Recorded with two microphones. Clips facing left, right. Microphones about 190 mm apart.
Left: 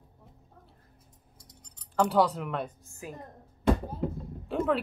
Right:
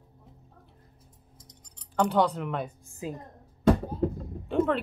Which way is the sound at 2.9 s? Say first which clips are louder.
Right 6 dB; 20° right (ahead or behind).